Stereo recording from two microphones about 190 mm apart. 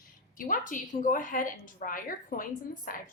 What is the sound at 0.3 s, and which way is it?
A woman's voice, 45° left (ahead or behind).